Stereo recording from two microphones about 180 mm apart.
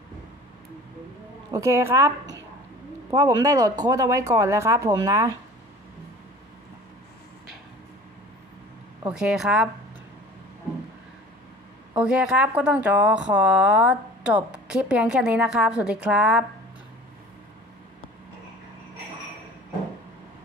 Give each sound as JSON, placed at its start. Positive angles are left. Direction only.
{"t": 1.5, "sound": "speech", "side_deg": -15}
{"t": 9.1, "sound": "speech", "side_deg": -5}
{"t": 11.9, "sound": "speech", "side_deg": -5}